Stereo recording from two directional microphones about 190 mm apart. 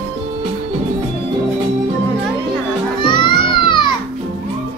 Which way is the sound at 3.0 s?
25° left (ahead or behind).